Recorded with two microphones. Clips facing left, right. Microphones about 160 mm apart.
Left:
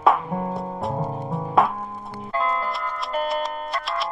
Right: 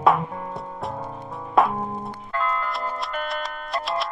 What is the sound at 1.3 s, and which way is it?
Music, centre (ahead or behind).